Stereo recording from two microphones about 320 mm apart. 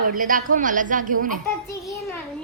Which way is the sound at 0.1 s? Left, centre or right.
Right.